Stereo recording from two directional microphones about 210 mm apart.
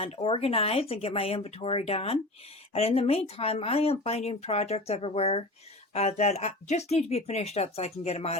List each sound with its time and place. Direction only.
0.0 s speech: 30° left (ahead or behind)